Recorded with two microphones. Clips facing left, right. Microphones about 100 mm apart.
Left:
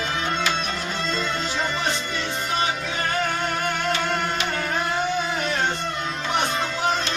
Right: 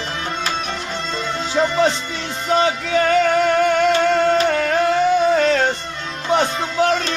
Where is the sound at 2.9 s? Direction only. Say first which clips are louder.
Right 10 dB; 90° right.